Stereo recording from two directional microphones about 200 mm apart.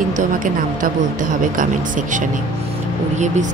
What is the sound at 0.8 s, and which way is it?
Speech, 40° right (ahead or behind).